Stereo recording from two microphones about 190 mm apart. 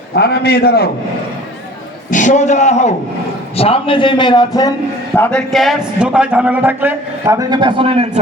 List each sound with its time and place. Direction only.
0.1 s a man's voice: 55° left (ahead or behind)
2.0 s a man's voice: 40° left (ahead or behind); by 4.7 s 20° left (ahead or behind)
5.1 s a man's voice: 10° left (ahead or behind); by 8.2 s 30° right (ahead or behind)